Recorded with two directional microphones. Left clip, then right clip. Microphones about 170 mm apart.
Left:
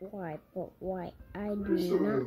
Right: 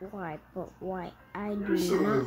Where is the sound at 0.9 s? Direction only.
5° left (ahead or behind).